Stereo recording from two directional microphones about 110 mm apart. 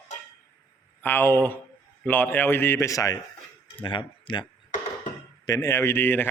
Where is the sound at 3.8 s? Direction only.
45° left (ahead or behind).